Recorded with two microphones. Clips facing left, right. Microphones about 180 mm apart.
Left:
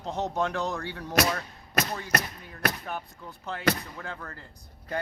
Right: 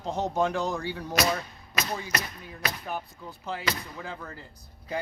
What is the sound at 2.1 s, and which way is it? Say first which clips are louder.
Speech: left 2 dB; 60° left (ahead or behind).